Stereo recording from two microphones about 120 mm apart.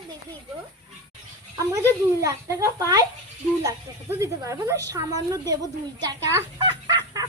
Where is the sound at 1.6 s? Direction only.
30° right (ahead or behind).